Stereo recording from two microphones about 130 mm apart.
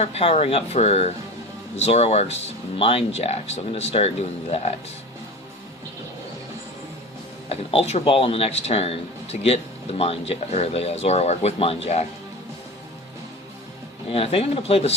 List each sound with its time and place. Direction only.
0.0 s speech: 50° left (ahead or behind)
7.5 s speech: 50° left (ahead or behind)
14.1 s speech: 50° left (ahead or behind)